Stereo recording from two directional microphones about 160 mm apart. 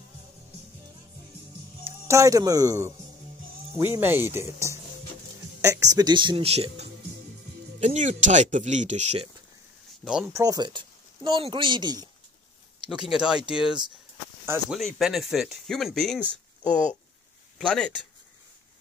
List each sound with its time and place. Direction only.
2.0 s speech: 20° right (ahead or behind); by 9.3 s 45° right (ahead or behind)
10.0 s speech: 5° right (ahead or behind)
10.3 s speech: 25° right (ahead or behind)
12.8 s speech: 5° right (ahead or behind)